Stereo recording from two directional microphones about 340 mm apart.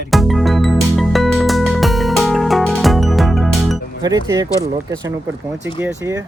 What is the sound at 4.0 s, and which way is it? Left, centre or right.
Speech, centre.